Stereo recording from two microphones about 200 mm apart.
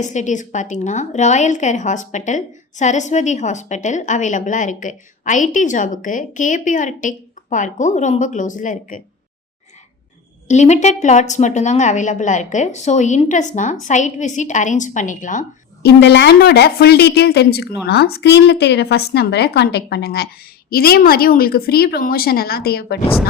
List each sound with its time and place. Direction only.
0.0 s a woman's voice: 35° left (ahead or behind)
10.5 s a woman's voice: 35° left (ahead or behind)
16.0 s a woman's voice: 60° left (ahead or behind)